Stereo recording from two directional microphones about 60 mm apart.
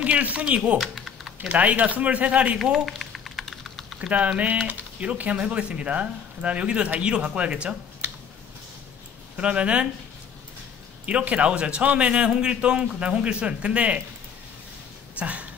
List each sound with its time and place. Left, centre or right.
0.0 s speech: right
0.7 s typing: centre
1.5 s speech: right
2.6 s typing: centre
4.1 s speech: right
9.4 s speech: centre
11.1 s speech: centre
15.1 s a sound: right